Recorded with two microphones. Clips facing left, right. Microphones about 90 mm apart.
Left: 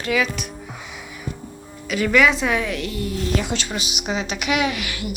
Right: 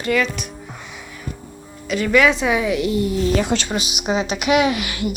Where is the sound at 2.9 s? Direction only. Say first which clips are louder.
Right 7 dB; 20° right (ahead or behind).